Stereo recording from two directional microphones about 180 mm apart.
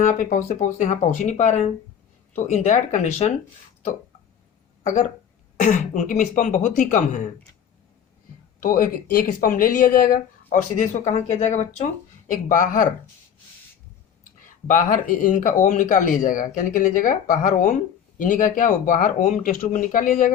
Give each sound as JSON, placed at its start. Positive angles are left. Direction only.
{"t": 0.0, "sound": "speech", "side_deg": 45}
{"t": 4.8, "sound": "speech", "side_deg": 45}
{"t": 8.6, "sound": "speech", "side_deg": 50}
{"t": 14.4, "sound": "speech", "side_deg": 45}